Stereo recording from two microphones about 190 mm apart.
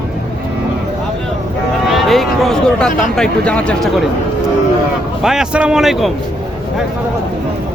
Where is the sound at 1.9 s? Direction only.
Centre (ahead or behind).